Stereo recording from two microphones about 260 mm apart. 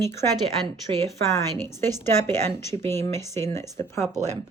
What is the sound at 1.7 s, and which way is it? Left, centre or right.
A woman's voice, centre.